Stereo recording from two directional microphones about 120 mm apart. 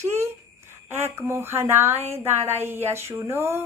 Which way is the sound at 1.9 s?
60° right (ahead or behind).